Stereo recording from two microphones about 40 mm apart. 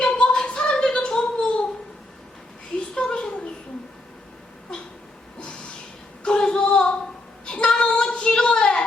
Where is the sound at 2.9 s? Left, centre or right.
Left.